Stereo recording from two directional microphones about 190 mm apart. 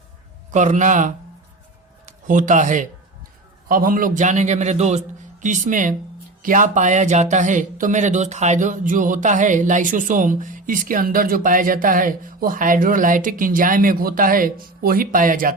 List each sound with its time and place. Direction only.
0.5 s a man's voice: 40° right (ahead or behind)